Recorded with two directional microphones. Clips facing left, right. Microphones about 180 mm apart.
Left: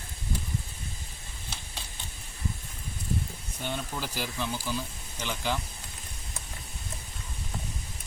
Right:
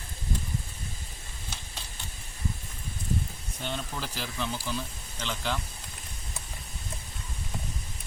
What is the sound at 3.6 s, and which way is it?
Speech, 10° left (ahead or behind).